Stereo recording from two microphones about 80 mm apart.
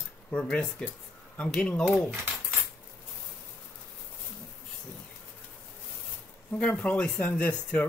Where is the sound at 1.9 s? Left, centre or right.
Centre.